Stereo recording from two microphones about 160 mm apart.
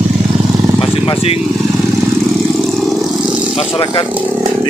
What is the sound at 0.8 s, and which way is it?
Vehicle, 35° left (ahead or behind).